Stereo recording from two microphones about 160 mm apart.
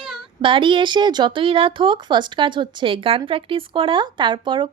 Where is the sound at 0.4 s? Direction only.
30° right (ahead or behind).